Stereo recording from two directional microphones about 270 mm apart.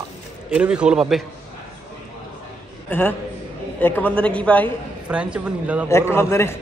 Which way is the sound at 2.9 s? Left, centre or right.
Centre.